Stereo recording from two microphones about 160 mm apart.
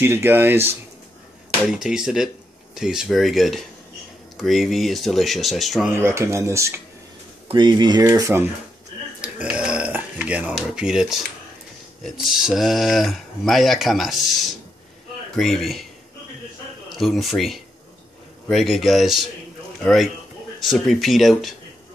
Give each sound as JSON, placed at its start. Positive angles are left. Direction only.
{"t": 0.0, "sound": "speech", "side_deg": -15}
{"t": 1.7, "sound": "speech", "side_deg": -5}
{"t": 5.9, "sound": "speech", "side_deg": -15}
{"t": 7.4, "sound": "speech", "side_deg": -30}
{"t": 8.1, "sound": "speech", "side_deg": -15}
{"t": 9.2, "sound": "burping", "side_deg": -5}
{"t": 12.0, "sound": "speech", "side_deg": -5}
{"t": 16.9, "sound": "speech", "side_deg": 0}